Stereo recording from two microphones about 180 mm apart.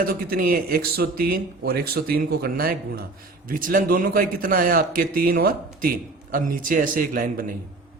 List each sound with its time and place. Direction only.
0.0 s a man's voice: 50° right (ahead or behind)